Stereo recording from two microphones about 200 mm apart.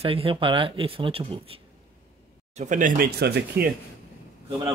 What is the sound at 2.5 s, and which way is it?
Speech, 40° right (ahead or behind).